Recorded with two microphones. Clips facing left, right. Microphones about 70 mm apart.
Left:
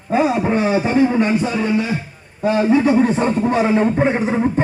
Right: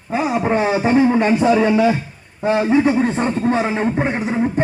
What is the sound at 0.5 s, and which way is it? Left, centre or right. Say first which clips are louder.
Speech: even; right.